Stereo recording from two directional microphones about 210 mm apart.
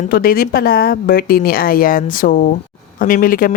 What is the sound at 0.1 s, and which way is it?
A woman's voice, 45° left (ahead or behind).